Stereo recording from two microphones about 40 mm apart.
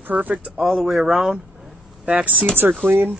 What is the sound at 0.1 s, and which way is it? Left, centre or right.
Speech, right.